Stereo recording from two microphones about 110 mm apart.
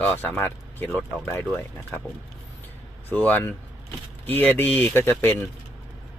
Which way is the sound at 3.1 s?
15° left (ahead or behind).